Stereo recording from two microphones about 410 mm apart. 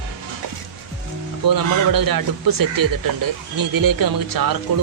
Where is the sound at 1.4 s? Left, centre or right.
Right.